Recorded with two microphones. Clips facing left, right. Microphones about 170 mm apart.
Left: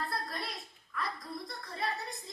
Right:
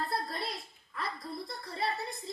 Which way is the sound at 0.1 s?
25° right (ahead or behind).